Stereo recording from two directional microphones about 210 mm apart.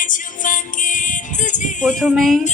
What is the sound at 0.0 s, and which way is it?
Music, 40° left (ahead or behind).